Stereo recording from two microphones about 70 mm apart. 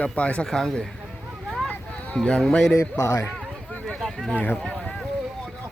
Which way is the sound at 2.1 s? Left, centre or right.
Centre.